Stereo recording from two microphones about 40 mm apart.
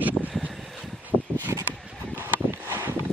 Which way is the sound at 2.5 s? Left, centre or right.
Right.